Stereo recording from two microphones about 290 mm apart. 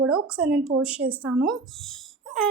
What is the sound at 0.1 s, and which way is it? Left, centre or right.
A woman's voice, centre.